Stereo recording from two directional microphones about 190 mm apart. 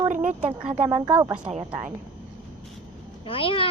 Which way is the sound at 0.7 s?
35° right (ahead or behind).